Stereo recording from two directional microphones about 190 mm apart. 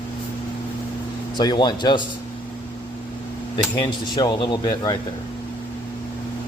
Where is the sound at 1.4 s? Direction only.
20° left (ahead or behind).